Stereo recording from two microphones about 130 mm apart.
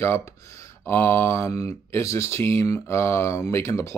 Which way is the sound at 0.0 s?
20° left (ahead or behind).